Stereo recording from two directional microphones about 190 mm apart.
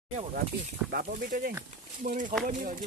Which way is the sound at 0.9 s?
50° right (ahead or behind).